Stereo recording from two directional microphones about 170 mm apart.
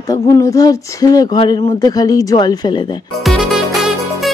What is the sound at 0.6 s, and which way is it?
Female singing, 20° left (ahead or behind).